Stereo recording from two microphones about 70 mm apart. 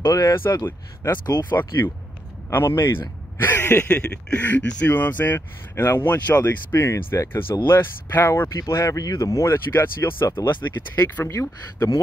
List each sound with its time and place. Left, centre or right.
0.1 s speech: left
0.7 s speech: left
1.2 s speech: left
1.5 s speech: left
3.9 s speech: centre
8.6 s speech: left
9.7 s speech: left
11.2 s speech: left